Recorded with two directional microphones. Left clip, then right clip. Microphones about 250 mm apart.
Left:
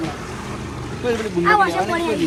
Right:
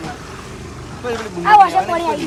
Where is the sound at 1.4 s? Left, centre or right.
Right.